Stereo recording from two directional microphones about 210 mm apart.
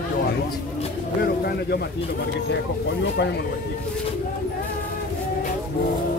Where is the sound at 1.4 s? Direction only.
50° left (ahead or behind).